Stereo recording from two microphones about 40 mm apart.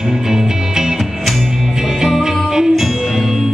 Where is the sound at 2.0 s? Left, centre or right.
Centre.